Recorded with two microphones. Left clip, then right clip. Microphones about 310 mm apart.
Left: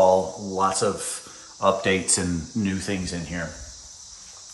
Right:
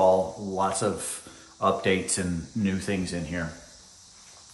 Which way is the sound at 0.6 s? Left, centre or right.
Centre.